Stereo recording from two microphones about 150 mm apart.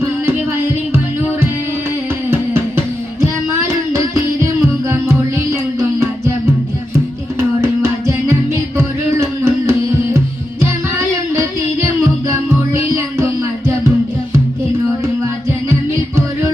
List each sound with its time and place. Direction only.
0.9 s music: 15° right (ahead or behind)
3.2 s child singing: 20° right (ahead or behind)
4.9 s music: 20° right (ahead or behind)
15.7 s music: 20° right (ahead or behind)